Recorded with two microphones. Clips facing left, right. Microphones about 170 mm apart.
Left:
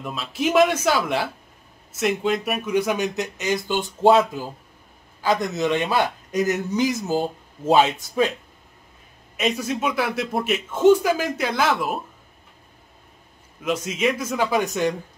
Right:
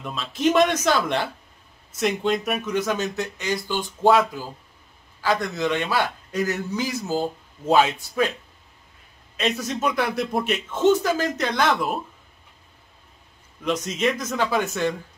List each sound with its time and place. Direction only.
0.0 s a man's voice: 5° left (ahead or behind); by 8.3 s 20° left (ahead or behind)
9.4 s speech: 5° left (ahead or behind)
13.6 s speech: 5° left (ahead or behind)